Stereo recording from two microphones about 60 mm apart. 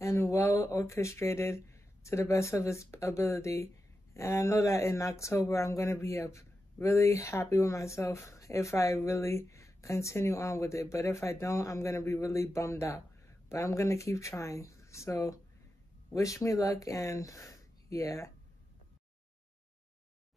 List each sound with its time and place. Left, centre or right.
0.0 s speech: left